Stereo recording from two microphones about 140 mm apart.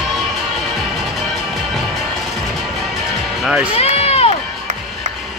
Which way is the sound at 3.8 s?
45° left (ahead or behind).